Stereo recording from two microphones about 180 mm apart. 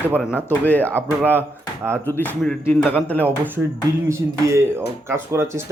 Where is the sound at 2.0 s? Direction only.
10° left (ahead or behind).